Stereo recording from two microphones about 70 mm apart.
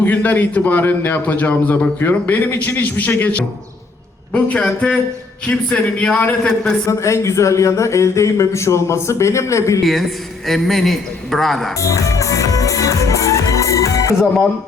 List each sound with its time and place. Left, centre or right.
0.0 s a man's voice: left
6.8 s speech: left
9.8 s a man's voice: centre
11.8 s music: left